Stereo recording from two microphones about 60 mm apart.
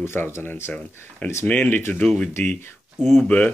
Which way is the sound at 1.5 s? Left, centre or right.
Left.